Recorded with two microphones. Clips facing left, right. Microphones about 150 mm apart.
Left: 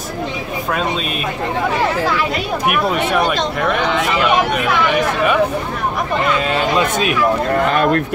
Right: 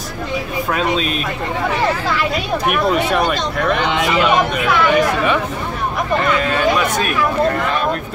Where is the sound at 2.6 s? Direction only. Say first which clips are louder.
Right 1 dB; centre (ahead or behind).